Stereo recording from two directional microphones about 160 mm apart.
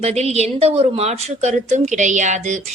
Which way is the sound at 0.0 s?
40° right (ahead or behind).